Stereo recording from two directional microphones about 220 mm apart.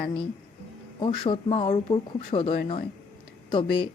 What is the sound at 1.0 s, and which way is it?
A woman's voice, 20° left (ahead or behind).